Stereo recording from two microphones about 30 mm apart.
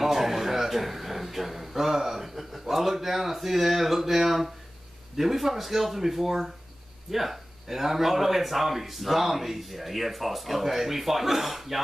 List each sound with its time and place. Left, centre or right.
0.0 s a man's voice: centre